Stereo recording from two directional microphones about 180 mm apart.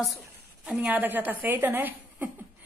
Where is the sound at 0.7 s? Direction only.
10° right (ahead or behind).